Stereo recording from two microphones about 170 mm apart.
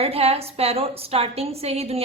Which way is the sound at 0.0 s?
35° right (ahead or behind).